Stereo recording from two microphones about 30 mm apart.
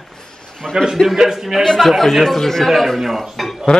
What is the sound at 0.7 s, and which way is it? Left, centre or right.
Speech, right.